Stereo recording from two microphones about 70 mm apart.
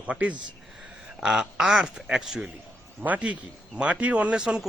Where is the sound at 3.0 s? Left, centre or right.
Right; by 4.6 s centre.